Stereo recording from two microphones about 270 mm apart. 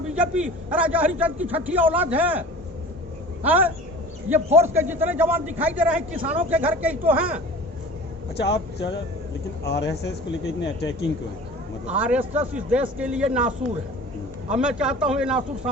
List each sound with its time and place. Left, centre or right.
0.2 s a man's voice: centre
3.4 s a man's voice: centre
8.4 s speech: left
11.9 s a man's voice: centre
14.5 s a man's voice: centre